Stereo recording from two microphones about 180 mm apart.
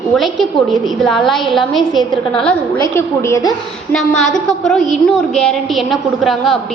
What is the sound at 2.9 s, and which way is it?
Speech, 15° left (ahead or behind).